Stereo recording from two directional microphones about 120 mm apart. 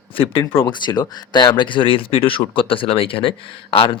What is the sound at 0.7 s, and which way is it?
Speech, 35° left (ahead or behind).